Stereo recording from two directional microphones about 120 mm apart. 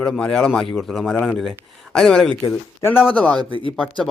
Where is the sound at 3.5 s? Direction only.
45° left (ahead or behind).